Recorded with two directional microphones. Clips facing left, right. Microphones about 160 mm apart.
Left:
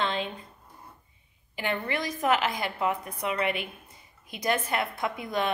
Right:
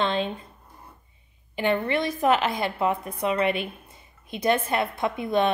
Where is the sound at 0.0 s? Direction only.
25° right (ahead or behind).